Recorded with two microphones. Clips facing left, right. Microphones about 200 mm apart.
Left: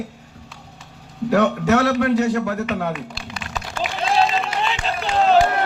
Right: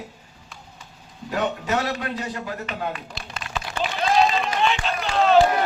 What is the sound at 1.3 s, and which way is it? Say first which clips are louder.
A man's voice: left 8 dB; 75° left (ahead or behind).